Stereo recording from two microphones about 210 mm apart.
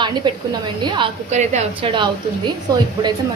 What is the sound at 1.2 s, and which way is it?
Speech, 35° right (ahead or behind).